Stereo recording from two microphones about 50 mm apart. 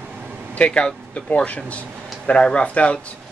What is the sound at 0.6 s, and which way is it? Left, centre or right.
Speech, left.